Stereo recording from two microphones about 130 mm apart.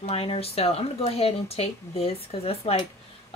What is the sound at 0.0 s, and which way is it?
Speech, 50° left (ahead or behind).